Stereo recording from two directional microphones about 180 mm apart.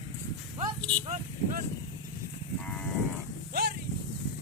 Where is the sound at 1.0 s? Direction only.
40° right (ahead or behind).